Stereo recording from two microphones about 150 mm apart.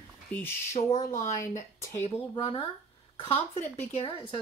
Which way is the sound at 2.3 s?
30° left (ahead or behind).